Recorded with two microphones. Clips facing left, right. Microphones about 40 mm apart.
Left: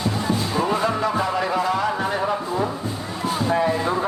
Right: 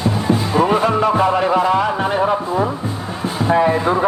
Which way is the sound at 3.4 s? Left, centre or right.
Right.